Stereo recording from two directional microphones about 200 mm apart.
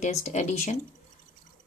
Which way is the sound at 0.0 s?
35° left (ahead or behind).